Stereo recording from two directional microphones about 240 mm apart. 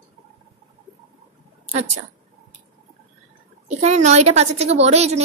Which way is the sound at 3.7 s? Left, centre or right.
Right.